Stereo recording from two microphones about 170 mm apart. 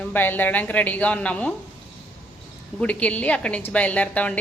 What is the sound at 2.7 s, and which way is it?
A woman's voice, 10° left (ahead or behind).